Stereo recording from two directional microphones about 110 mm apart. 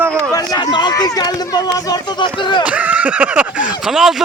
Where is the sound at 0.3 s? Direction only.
40° left (ahead or behind).